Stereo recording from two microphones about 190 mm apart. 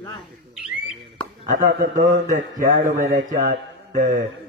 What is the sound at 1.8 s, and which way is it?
A man's voice, 40° right (ahead or behind).